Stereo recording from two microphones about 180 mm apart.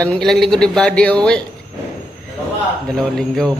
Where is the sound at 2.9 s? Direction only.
5° left (ahead or behind).